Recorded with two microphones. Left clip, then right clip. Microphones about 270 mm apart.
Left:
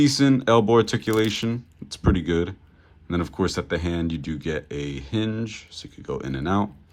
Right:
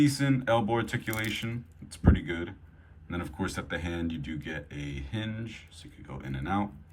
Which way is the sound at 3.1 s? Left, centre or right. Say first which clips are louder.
Left 10 dB; centre.